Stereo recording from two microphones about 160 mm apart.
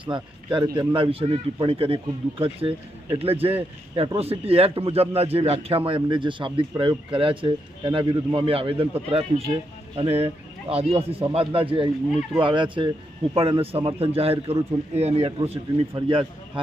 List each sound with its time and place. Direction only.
0.0 s speech: 30° right (ahead or behind)